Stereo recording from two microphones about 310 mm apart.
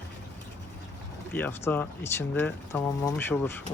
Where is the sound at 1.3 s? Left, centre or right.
Centre.